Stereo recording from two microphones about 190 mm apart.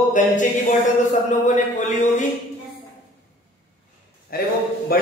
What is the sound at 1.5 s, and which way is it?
Speech, 40° left (ahead or behind).